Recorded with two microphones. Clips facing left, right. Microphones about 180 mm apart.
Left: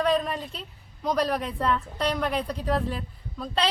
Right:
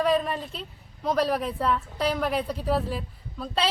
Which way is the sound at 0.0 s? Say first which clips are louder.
Right 1 dB; centre (ahead or behind).